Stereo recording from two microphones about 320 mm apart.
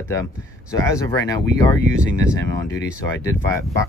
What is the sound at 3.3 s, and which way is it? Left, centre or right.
Speech, centre.